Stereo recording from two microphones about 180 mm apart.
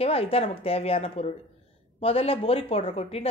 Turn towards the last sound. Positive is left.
turn(degrees=35)  # may be behind; listen again after turning